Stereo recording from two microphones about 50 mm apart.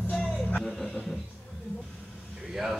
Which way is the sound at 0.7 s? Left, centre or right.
Centre.